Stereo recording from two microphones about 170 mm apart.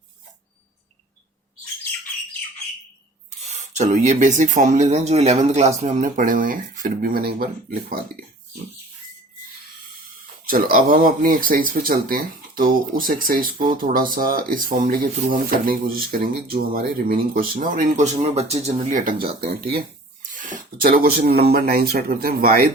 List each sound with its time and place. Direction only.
3.4 s speech: 40° right (ahead or behind); by 7.9 s 60° right (ahead or behind)
10.5 s speech: 60° right (ahead or behind)